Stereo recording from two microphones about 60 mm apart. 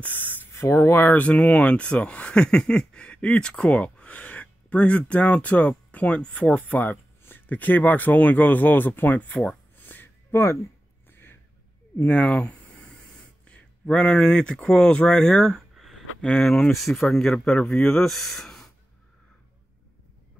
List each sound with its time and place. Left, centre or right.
0.0 s spray: left
0.5 s speech: left
1.0 s speech: left
9.8 s a sound: left
10.3 s speech: left
11.1 s gasp: left
12.0 s speech: left
15.7 s a sound: centre
16.3 s speech: centre